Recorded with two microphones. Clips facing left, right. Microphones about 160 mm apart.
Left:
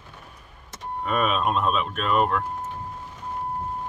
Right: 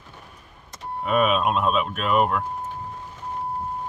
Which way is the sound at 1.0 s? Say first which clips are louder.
Right 3 dB; 5° right (ahead or behind).